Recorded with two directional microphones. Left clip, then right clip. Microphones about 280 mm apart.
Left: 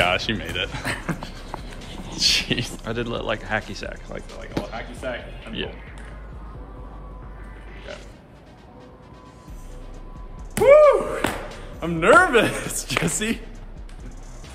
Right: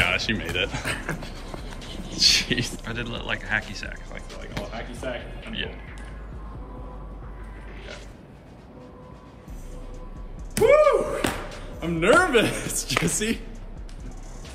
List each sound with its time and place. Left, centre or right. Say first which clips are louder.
0.0 s speech: left 2 dB; centre
0.8 s music: left 1 dB; left
2.1 s speech: right 1 dB; centre
10.5 s a sound: left 4 dB; centre
11.8 s speech: left 4 dB; centre